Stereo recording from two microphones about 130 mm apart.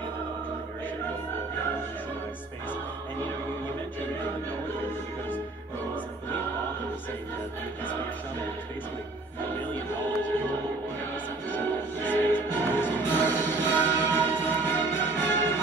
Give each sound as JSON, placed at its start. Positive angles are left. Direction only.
{"t": 11.5, "sound": "music", "side_deg": 15}